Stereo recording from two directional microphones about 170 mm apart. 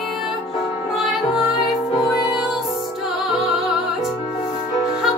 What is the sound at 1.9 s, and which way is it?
Music, 25° left (ahead or behind).